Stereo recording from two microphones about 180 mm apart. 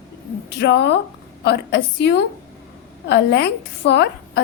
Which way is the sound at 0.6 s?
70° left (ahead or behind).